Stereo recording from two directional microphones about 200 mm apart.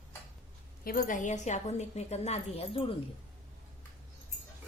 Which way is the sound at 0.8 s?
45° left (ahead or behind).